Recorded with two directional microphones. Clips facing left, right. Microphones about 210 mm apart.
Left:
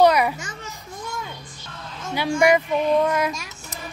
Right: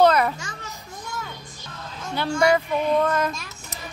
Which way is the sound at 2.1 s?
10° left (ahead or behind).